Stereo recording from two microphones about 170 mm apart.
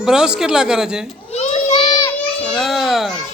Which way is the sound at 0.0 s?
5° right (ahead or behind).